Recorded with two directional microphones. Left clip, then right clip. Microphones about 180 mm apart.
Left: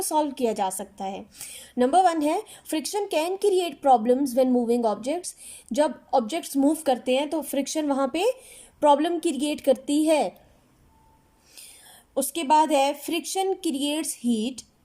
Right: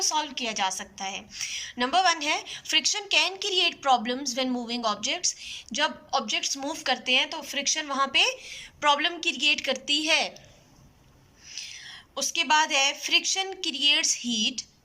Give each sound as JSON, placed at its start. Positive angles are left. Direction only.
{"t": 0.0, "sound": "a woman's voice", "side_deg": 50}
{"t": 11.7, "sound": "a woman's voice", "side_deg": 45}